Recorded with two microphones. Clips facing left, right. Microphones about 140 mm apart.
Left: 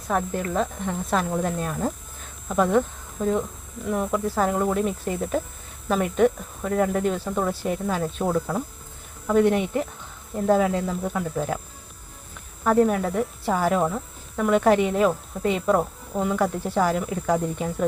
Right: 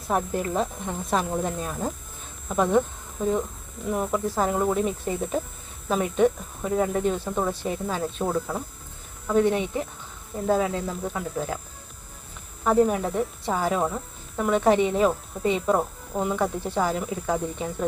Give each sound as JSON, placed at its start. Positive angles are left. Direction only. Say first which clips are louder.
{"t": 0.1, "sound": "speech", "louder": "even", "side_deg": -15}
{"t": 12.6, "sound": "speech", "louder": "left 1 dB", "side_deg": 0}